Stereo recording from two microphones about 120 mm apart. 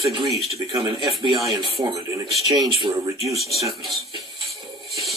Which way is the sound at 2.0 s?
30° right (ahead or behind).